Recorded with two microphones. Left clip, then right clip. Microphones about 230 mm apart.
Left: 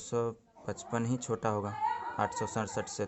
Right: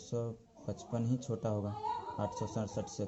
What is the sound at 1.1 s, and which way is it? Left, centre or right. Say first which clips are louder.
Speech: left 3 dB; left.